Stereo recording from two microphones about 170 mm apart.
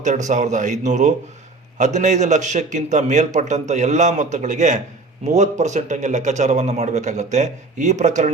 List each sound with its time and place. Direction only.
0.0 s a man's voice: 45° right (ahead or behind)